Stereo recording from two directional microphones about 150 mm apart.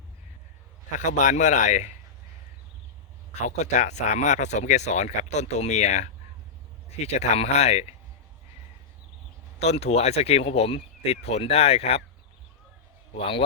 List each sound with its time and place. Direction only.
0.9 s a man's voice: 55° left (ahead or behind)
3.4 s speech: 50° left (ahead or behind)
9.6 s speech: 45° left (ahead or behind)
13.1 s a man's voice: 35° left (ahead or behind)